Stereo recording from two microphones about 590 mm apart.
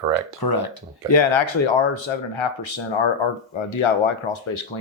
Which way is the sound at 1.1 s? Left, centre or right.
Left.